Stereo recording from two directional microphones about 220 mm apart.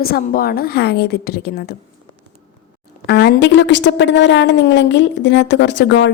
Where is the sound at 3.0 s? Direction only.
50° left (ahead or behind).